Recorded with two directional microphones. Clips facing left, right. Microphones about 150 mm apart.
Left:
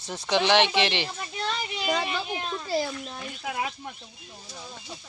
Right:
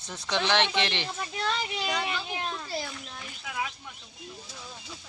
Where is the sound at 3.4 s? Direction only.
45° left (ahead or behind).